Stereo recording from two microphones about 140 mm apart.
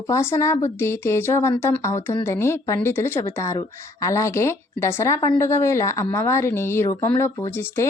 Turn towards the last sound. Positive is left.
turn(degrees=15)  # may be behind; listen again after turning